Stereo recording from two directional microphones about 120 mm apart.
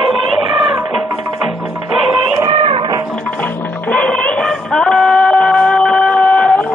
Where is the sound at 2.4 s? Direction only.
50° right (ahead or behind).